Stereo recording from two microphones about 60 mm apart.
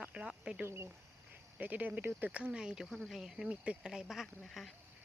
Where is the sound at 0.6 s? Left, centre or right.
Right.